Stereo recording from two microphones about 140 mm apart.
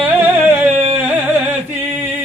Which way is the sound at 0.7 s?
45° right (ahead or behind).